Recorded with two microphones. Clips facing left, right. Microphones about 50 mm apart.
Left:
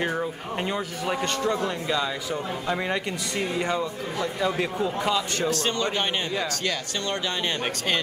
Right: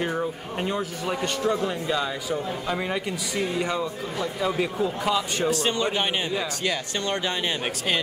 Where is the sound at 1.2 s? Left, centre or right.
Centre.